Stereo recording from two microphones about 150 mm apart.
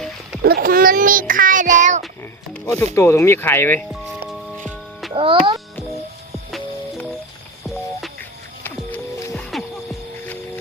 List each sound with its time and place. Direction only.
0.4 s a sound: 85° right; by 1.2 s 65° right (ahead or behind)
1.3 s child singing: 65° right (ahead or behind)
2.9 s speech: 15° left (ahead or behind)
4.3 s music: centre (ahead or behind)
5.1 s a child's voice: 35° right (ahead or behind)
8.6 s music: 10° left (ahead or behind)